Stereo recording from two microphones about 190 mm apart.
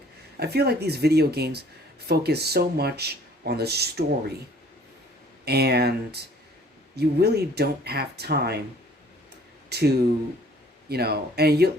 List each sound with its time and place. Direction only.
0.3 s speech: 60° right (ahead or behind)
5.5 s speech: 60° right (ahead or behind)
9.6 s speech: 60° right (ahead or behind)